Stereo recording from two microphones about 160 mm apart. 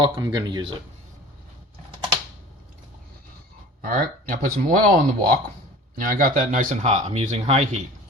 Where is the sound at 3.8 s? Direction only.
60° right (ahead or behind); by 7.8 s 45° right (ahead or behind).